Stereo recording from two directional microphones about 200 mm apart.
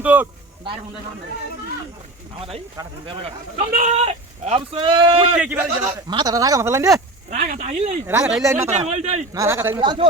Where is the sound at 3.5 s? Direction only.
35° right (ahead or behind).